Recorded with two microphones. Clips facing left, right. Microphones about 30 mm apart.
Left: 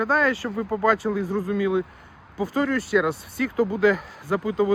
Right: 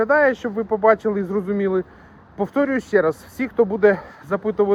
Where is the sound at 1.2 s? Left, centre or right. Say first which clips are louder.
Right 3 dB; left.